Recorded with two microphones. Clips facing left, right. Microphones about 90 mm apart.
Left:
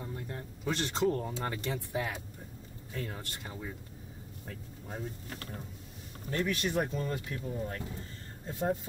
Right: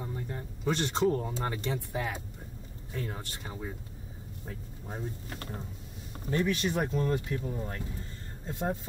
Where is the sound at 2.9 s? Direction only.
5° right (ahead or behind).